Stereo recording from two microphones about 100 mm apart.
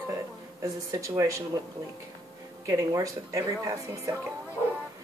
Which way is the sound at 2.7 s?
35° right (ahead or behind).